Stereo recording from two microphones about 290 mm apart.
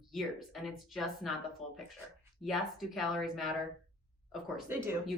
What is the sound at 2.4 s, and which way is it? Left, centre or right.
A woman's voice, centre.